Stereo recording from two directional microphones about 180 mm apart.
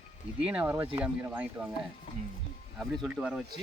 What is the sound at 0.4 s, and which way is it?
Speech, 10° right (ahead or behind).